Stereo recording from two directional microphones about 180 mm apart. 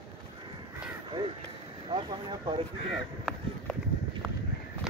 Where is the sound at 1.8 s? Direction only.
25° right (ahead or behind).